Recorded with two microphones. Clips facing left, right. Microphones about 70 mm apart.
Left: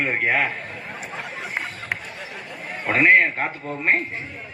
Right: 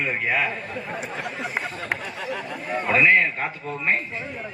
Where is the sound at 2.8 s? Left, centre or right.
Left.